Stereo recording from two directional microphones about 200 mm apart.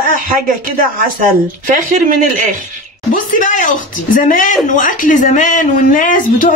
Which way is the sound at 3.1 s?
40° left (ahead or behind).